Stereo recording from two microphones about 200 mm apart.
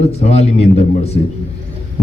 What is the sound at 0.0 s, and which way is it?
A man's voice, 30° left (ahead or behind).